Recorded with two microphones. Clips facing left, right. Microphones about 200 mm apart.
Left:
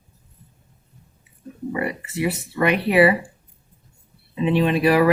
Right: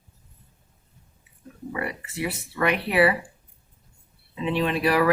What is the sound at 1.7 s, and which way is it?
Speech, 15° left (ahead or behind).